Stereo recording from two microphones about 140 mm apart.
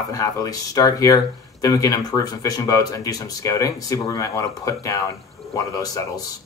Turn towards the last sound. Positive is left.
turn(degrees=25)  # may be behind; listen again after turning